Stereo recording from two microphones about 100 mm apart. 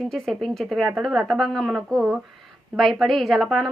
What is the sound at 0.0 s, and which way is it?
Speech, centre (ahead or behind).